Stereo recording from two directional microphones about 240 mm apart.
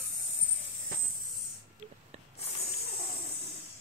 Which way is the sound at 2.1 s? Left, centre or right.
Right.